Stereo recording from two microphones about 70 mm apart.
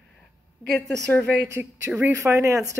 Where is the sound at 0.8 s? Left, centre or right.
Right.